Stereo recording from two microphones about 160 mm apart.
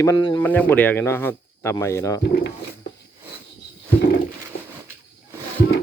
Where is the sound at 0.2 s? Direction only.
30° left (ahead or behind).